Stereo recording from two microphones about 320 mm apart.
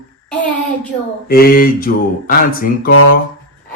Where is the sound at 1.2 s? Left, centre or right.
Left.